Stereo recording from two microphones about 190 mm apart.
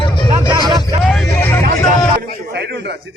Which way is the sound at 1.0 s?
Centre (ahead or behind).